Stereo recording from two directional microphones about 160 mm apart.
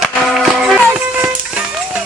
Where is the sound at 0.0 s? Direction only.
Centre (ahead or behind).